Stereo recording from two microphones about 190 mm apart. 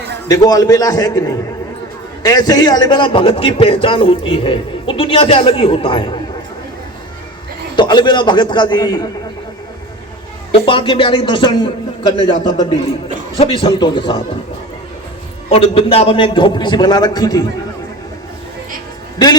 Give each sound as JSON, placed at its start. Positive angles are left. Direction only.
{"t": 0.3, "sound": "a man's voice", "side_deg": 20}
{"t": 7.8, "sound": "a man's voice", "side_deg": 25}
{"t": 10.7, "sound": "a man's voice", "side_deg": 25}
{"t": 13.4, "sound": "a man's voice", "side_deg": 30}
{"t": 15.4, "sound": "a man's voice", "side_deg": 30}